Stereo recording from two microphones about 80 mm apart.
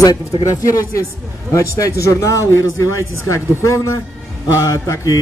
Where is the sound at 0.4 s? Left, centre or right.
Left.